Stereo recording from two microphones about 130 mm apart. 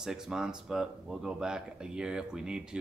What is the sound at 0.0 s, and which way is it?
Speech, 5° right (ahead or behind).